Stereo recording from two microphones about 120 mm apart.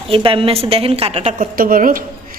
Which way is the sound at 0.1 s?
50° right (ahead or behind).